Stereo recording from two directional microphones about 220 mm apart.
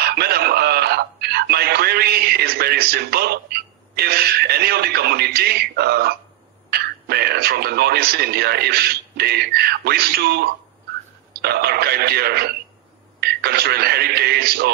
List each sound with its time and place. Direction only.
0.0 s music: 45° right (ahead or behind)
6.7 s speech: 45° right (ahead or behind)